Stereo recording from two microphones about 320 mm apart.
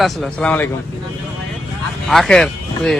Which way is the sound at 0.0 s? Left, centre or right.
Centre.